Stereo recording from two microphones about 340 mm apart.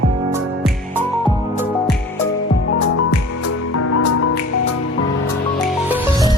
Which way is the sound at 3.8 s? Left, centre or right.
Left.